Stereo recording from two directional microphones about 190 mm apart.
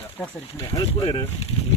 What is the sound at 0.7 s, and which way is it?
Speech, 25° left (ahead or behind).